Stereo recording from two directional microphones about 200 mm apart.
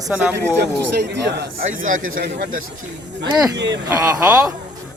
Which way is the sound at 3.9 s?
15° right (ahead or behind).